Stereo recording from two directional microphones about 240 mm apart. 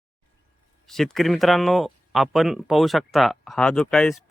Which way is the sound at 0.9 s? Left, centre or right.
Centre.